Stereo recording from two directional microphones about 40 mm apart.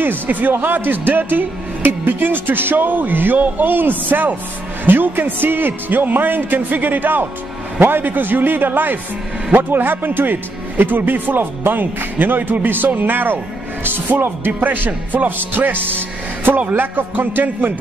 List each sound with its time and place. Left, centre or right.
0.0 s a man's voice: right